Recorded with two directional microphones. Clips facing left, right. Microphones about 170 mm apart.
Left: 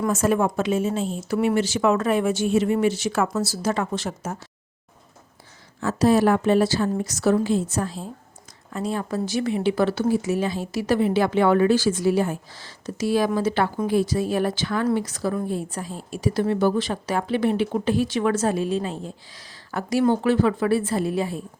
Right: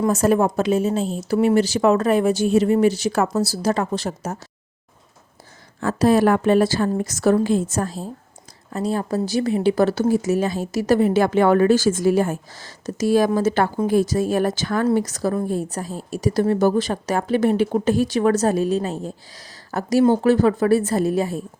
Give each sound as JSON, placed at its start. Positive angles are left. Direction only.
{"t": 0.1, "sound": "a woman's voice", "side_deg": -35}
{"t": 5.8, "sound": "a woman's voice", "side_deg": -55}